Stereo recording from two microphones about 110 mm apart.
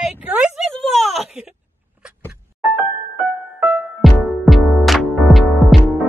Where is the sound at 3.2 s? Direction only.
10° right (ahead or behind).